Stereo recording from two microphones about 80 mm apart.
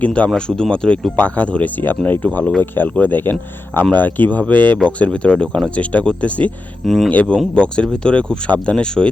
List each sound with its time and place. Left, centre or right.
0.0 s speech: centre
6.8 s speech: centre
7.1 s speech: centre